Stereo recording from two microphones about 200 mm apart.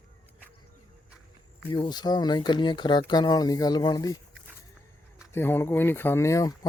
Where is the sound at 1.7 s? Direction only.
20° left (ahead or behind).